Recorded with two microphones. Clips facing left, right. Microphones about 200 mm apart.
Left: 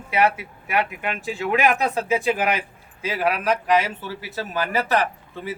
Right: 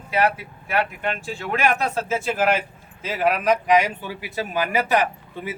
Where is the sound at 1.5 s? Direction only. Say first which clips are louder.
Left 1 dB; 15° left (ahead or behind).